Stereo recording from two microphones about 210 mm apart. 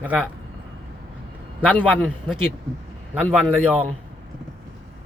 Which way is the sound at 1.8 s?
Centre (ahead or behind).